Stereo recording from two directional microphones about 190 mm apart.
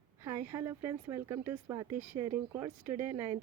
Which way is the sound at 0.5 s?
15° right (ahead or behind).